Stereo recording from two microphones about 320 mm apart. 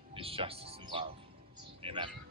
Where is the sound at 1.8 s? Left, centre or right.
Centre.